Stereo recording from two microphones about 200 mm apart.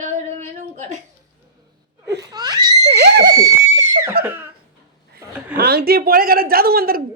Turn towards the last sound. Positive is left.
turn(degrees=-50)  # may be behind; listen again after turning